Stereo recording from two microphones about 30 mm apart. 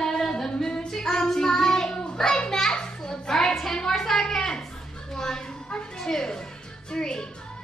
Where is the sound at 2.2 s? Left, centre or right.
Centre.